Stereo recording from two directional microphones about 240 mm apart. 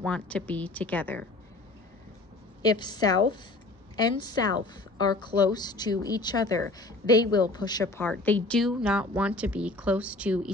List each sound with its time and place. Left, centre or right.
0.0 s a woman's voice: centre
2.6 s a woman's voice: centre